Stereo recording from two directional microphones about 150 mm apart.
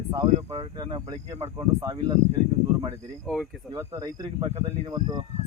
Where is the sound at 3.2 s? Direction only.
5° left (ahead or behind).